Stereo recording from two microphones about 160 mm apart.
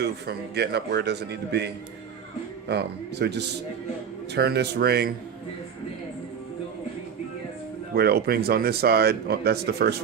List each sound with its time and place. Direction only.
0.0 s a man's voice: 90° right
7.9 s speech: 80° right